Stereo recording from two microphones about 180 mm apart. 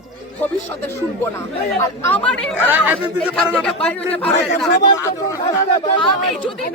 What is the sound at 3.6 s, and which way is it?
Speech, 5° left (ahead or behind).